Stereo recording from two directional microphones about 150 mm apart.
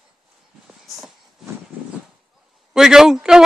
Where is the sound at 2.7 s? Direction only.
Centre (ahead or behind).